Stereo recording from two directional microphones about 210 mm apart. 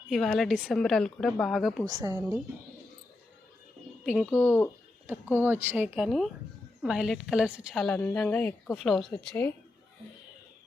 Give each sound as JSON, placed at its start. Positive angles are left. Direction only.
{"t": 0.1, "sound": "a woman's voice", "side_deg": 0}
{"t": 1.8, "sound": "speech", "side_deg": -20}
{"t": 4.0, "sound": "speech", "side_deg": 0}
{"t": 4.3, "sound": "speech", "side_deg": 10}
{"t": 5.4, "sound": "a woman's voice", "side_deg": -10}